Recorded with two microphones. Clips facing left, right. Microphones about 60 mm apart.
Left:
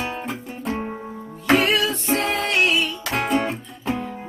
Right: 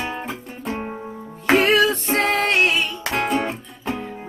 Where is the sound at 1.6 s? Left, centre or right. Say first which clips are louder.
Right 4 dB; right.